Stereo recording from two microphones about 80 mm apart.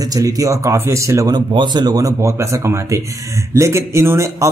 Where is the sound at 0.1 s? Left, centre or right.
Right.